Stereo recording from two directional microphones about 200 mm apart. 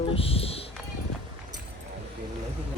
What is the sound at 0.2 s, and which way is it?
Speech, 30° left (ahead or behind).